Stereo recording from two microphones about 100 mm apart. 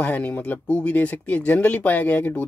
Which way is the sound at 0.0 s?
15° left (ahead or behind).